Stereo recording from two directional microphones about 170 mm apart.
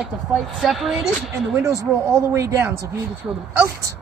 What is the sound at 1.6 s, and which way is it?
Speech, 20° right (ahead or behind).